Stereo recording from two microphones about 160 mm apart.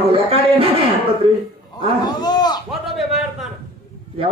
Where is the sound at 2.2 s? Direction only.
25° left (ahead or behind).